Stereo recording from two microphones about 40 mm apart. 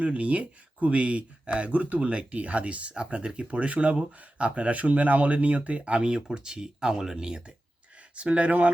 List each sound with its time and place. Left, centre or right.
0.0 s speech: right
8.1 s speech: right